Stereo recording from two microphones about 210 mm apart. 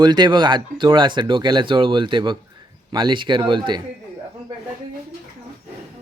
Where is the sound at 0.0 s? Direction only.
20° right (ahead or behind).